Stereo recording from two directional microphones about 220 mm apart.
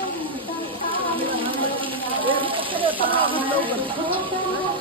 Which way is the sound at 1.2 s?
25° right (ahead or behind).